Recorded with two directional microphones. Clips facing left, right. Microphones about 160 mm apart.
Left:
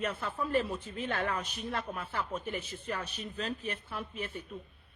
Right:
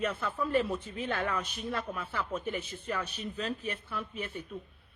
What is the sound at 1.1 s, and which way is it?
Speech, 40° left (ahead or behind).